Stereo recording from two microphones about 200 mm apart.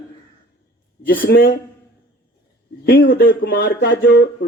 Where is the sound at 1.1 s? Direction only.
50° left (ahead or behind).